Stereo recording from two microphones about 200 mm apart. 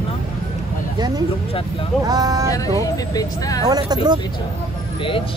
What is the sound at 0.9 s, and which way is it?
Speech, 20° right (ahead or behind).